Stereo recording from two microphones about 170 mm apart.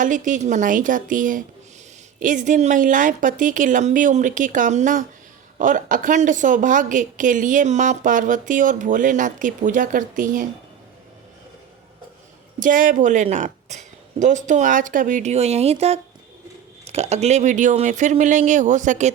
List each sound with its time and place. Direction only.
0.0 s a woman's voice: 50° right (ahead or behind)
12.5 s a woman's voice: 50° right (ahead or behind)